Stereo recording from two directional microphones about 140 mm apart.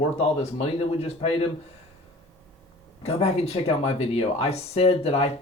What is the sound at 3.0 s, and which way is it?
Speech, 50° left (ahead or behind).